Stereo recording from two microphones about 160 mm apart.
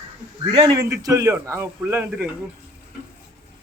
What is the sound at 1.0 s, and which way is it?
A man's voice, 20° right (ahead or behind).